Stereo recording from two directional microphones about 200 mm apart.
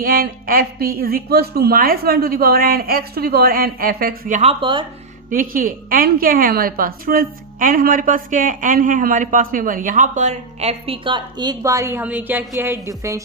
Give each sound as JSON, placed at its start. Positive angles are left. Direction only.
{"t": 0.0, "sound": "a woman's voice", "side_deg": -45}
{"t": 5.3, "sound": "a woman's voice", "side_deg": -45}